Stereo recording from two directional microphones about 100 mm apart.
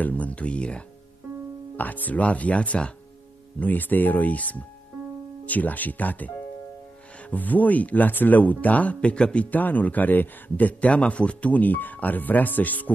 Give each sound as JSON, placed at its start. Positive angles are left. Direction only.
{"t": 0.0, "sound": "speech", "side_deg": 15}